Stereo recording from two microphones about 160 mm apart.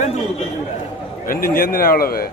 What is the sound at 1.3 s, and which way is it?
Speech, 60° left (ahead or behind).